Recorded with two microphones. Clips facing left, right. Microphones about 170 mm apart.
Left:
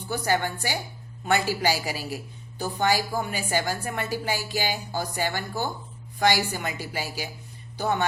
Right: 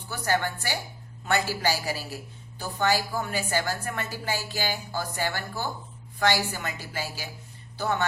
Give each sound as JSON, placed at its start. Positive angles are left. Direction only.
{"t": 0.1, "sound": "a woman's voice", "side_deg": 15}